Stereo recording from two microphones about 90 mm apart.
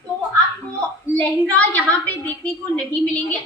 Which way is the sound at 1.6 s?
15° left (ahead or behind).